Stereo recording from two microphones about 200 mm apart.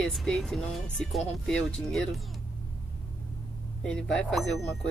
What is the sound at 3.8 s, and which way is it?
Speech, 5° left (ahead or behind).